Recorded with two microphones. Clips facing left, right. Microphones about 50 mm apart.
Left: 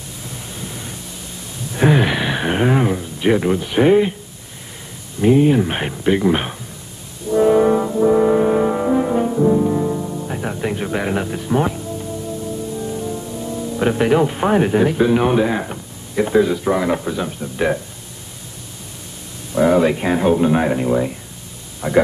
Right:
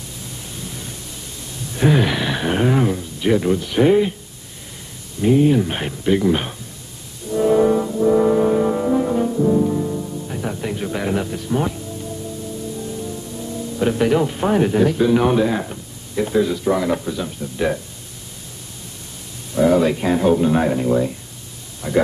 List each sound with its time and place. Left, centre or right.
0.7 s pink noise: left
1.8 s a sound: centre
5.2 s speech: centre
7.2 s brass instrument: left
8.2 s music: centre
12.7 s speech: left
19.5 s speech: centre